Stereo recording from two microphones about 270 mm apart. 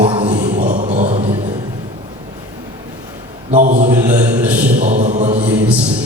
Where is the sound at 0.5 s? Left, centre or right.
Right.